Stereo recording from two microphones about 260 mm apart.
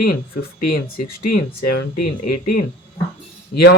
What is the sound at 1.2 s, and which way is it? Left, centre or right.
Speech, left.